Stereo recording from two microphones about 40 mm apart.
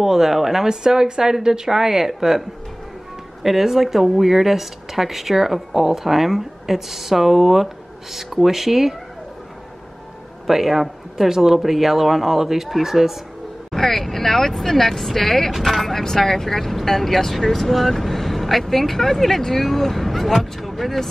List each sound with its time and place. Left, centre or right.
0.0 s speech: centre
0.7 s speech: centre
3.4 s speech: centre
10.4 s speech: centre
13.7 s speech: centre
16.0 s speech: centre